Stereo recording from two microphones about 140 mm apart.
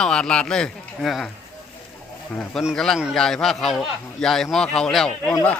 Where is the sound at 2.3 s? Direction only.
10° left (ahead or behind).